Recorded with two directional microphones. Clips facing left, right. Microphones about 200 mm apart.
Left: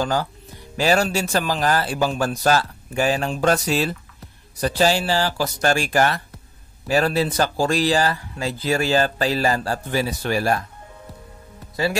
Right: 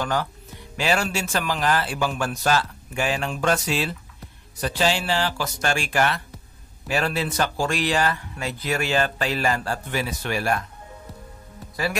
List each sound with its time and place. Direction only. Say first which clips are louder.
0.0 s speech: left 3 dB; 30° left (ahead or behind)
11.7 s speech: left 4 dB; 25° left (ahead or behind)